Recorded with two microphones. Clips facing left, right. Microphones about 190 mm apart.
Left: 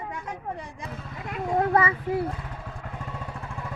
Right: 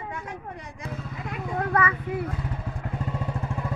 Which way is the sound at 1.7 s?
25° left (ahead or behind).